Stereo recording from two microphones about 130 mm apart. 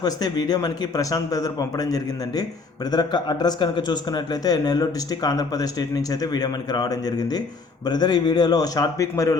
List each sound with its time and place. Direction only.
0.0 s speech: 30° left (ahead or behind)